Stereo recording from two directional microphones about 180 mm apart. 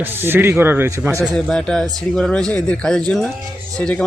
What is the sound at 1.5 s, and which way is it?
Speech, 5° left (ahead or behind).